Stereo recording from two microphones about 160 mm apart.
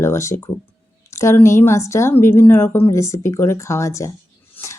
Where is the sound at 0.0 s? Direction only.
15° left (ahead or behind).